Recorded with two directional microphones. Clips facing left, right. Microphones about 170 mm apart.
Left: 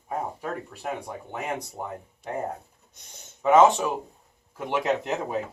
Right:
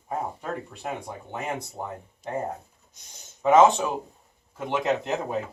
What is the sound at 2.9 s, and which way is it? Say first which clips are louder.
Speech: left 3 dB; 60° left (ahead or behind).